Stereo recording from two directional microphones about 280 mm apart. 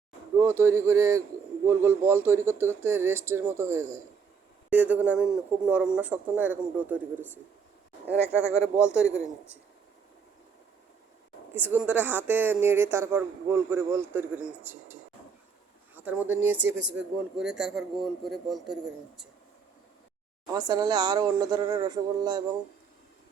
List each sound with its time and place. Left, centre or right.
0.3 s a man's voice: centre
8.4 s speech: centre
11.5 s speech: centre
16.0 s a man's voice: centre
16.6 s speech: right
17.0 s a man's voice: centre
20.5 s speech: centre